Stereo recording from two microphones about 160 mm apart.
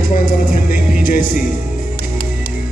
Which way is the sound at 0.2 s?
60° left (ahead or behind).